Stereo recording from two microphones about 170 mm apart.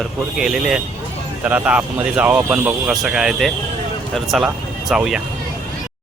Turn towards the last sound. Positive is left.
turn(degrees=-5)  # may be behind; listen again after turning